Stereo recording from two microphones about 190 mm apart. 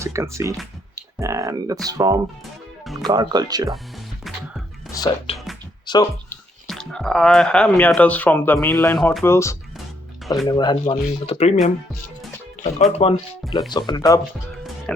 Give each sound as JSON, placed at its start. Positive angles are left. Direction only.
{"t": 0.0, "sound": "speech", "side_deg": -15}
{"t": 2.8, "sound": "speech", "side_deg": 0}
{"t": 3.1, "sound": "speech", "side_deg": -20}
{"t": 4.9, "sound": "speech", "side_deg": 20}
{"t": 5.8, "sound": "music", "side_deg": 20}
{"t": 6.7, "sound": "speech", "side_deg": 0}
{"t": 9.0, "sound": "speech", "side_deg": 0}
{"t": 9.2, "sound": "speech", "side_deg": 15}
{"t": 12.9, "sound": "speech", "side_deg": 30}
{"t": 13.4, "sound": "speech", "side_deg": 0}
{"t": 13.7, "sound": "speech", "side_deg": 20}
{"t": 14.9, "sound": "music", "side_deg": 5}